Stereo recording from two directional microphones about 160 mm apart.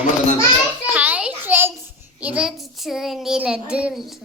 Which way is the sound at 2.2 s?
5° right (ahead or behind).